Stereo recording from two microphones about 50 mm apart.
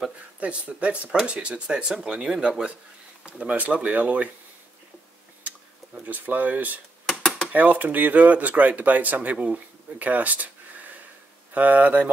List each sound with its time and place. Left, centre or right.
0.4 s speech: right
6.0 s speech: right
7.1 s a sound: centre
7.5 s speech: right